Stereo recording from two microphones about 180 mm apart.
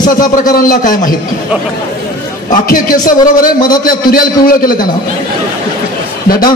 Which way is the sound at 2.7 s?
50° left (ahead or behind).